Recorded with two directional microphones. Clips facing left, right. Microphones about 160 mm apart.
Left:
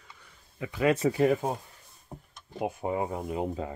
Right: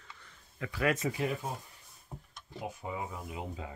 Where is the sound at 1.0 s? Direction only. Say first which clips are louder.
Left 9 dB; 45° left (ahead or behind).